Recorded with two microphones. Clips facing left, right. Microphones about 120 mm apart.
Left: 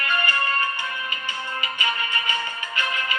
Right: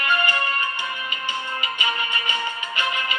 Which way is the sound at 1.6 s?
20° right (ahead or behind).